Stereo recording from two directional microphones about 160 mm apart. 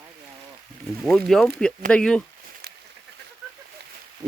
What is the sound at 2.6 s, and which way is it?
Duck, 90° right.